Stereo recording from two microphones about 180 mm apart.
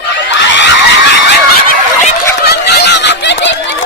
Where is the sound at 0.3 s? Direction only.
85° left.